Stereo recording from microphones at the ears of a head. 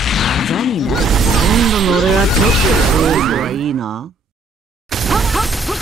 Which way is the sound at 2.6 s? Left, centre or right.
Right.